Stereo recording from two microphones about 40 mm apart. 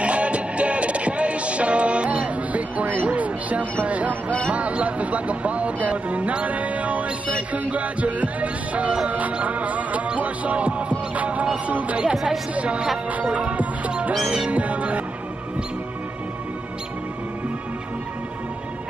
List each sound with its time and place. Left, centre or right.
0.0 s music: right
3.8 s a sound: right
4.5 s music: right
11.4 s speech: right
13.3 s music: right
14.2 s music: centre
14.5 s music: right